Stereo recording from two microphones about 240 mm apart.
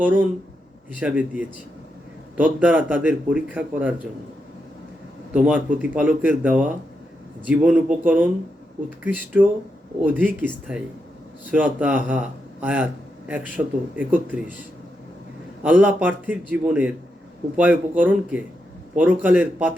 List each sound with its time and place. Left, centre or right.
0.0 s a man's voice: centre
5.3 s a man's voice: centre
15.6 s a man's voice: centre